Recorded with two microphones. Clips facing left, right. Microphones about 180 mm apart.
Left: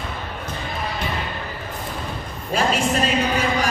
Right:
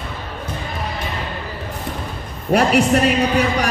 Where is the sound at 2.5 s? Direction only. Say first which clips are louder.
Right 6 dB; 65° right (ahead or behind).